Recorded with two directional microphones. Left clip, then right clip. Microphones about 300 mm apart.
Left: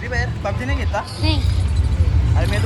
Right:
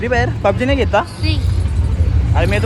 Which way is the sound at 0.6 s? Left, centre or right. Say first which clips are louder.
Right 9 dB; left.